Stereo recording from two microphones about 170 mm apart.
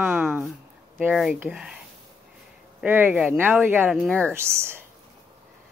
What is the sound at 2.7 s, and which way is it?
Speech, 10° right (ahead or behind).